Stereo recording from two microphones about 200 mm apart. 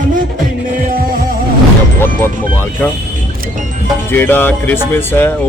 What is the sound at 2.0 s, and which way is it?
Speech, 10° left (ahead or behind).